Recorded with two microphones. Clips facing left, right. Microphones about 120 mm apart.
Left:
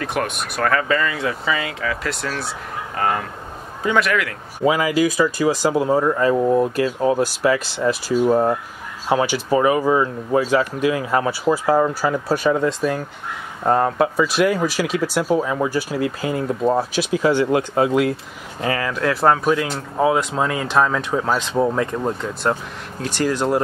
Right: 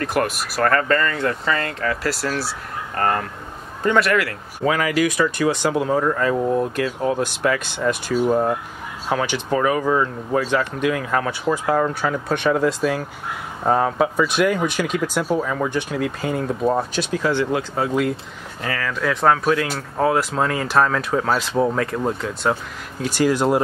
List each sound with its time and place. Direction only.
0.0 s speech: centre (ahead or behind)
4.6 s speech: 15° left (ahead or behind)
18.9 s speech: 5° left (ahead or behind)
20.2 s speech: centre (ahead or behind)